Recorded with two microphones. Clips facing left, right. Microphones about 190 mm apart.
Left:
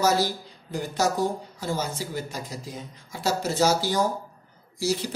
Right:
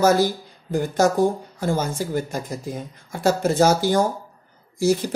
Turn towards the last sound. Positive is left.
turn(degrees=-50)  # may be behind; listen again after turning